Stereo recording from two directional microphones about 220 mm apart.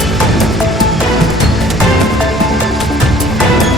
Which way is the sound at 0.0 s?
Centre (ahead or behind).